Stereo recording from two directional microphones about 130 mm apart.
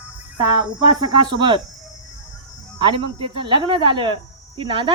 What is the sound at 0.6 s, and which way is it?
Speech, 35° right (ahead or behind).